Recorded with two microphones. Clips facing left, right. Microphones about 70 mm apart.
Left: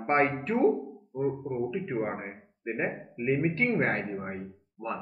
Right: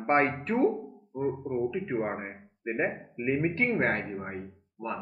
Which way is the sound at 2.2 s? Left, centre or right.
Centre.